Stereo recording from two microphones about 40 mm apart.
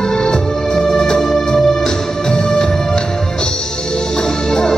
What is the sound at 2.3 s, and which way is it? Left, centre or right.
Music, centre.